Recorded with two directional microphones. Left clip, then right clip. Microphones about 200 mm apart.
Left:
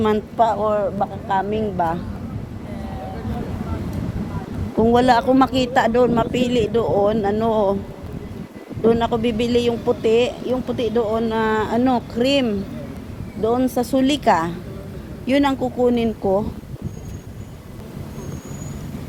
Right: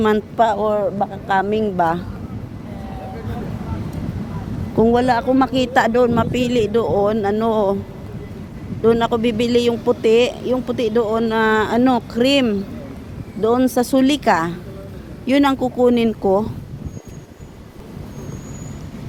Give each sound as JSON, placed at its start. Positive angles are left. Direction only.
{"t": 0.3, "sound": "speech", "side_deg": -40}
{"t": 4.9, "sound": "speech", "side_deg": -10}
{"t": 5.5, "sound": "speech", "side_deg": -20}
{"t": 8.8, "sound": "speech", "side_deg": -25}